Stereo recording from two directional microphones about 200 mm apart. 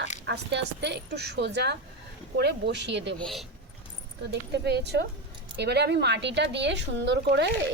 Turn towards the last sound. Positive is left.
turn(degrees=-60)  # may be behind; listen again after turning